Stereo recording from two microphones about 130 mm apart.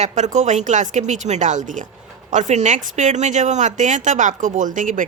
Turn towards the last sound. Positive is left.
turn(degrees=-80)